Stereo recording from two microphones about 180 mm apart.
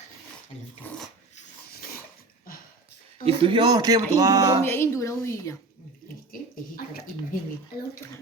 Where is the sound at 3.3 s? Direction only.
30° right (ahead or behind).